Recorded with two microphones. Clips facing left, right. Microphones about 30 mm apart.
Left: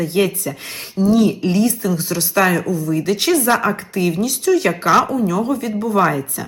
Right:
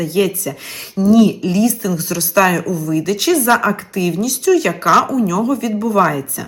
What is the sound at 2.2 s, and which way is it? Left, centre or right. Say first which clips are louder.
Speech: right 3 dB; centre.